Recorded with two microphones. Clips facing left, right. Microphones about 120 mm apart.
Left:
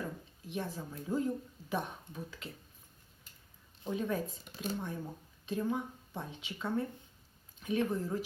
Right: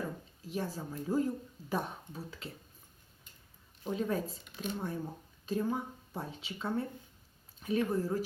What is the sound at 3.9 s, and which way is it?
Speech, 35° right (ahead or behind).